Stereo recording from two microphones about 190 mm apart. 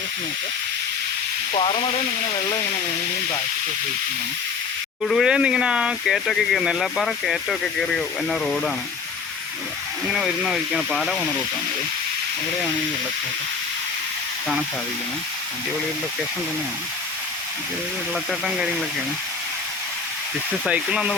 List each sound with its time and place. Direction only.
1.5 s speech: 30° left (ahead or behind)
5.0 s speech: centre (ahead or behind)
10.1 s speech: centre (ahead or behind)
18.1 s speech: centre (ahead or behind)
20.7 s speech: 5° right (ahead or behind)